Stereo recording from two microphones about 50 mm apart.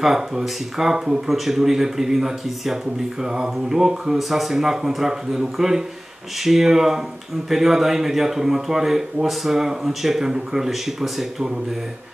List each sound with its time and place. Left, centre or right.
0.0 s speech: centre